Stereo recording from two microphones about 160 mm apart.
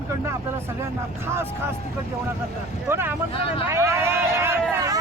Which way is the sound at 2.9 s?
15° right (ahead or behind).